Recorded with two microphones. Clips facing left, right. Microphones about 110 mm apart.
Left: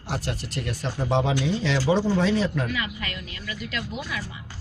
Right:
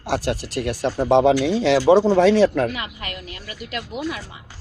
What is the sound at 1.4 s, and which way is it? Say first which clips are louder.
Speech: right 8 dB; 75° right (ahead or behind).